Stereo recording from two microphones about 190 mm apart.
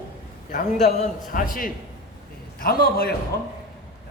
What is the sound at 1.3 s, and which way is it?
Speech, 50° left (ahead or behind).